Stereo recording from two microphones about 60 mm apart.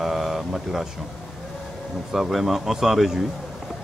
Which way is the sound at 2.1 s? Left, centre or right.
Centre.